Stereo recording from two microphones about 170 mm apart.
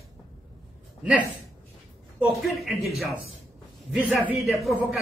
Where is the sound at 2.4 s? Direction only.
Centre (ahead or behind).